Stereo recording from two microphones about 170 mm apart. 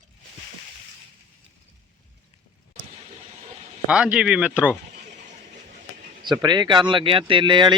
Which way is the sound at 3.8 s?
5° right (ahead or behind).